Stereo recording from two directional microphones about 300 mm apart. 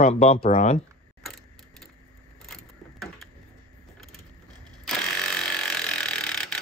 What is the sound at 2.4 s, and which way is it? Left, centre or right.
Vehicle, centre.